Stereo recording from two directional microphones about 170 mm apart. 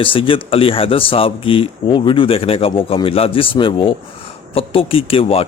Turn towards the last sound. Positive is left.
turn(degrees=35)  # may be behind; listen again after turning